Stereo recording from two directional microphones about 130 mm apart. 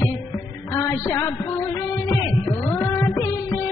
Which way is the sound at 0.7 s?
20° left (ahead or behind).